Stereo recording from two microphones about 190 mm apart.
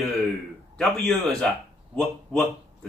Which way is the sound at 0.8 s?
5° left (ahead or behind).